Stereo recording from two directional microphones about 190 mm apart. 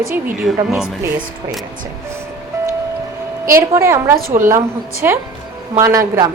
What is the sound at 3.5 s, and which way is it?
A woman's voice, 15° right (ahead or behind).